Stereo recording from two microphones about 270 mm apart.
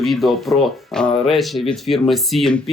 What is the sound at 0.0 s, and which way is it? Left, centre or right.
Speech, centre.